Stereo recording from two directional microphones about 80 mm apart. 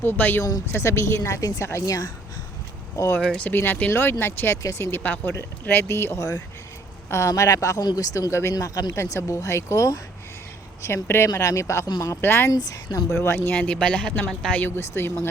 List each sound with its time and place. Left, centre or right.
0.0 s speech: left
1.4 s speech: left
1.6 s speech: left
3.2 s speech: centre
3.5 s speech: left
7.1 s speech: left
10.8 s speech: left
12.2 s speech: left
12.5 s speech: left
13.1 s speech: left
13.5 s speech: centre
14.8 s speech: left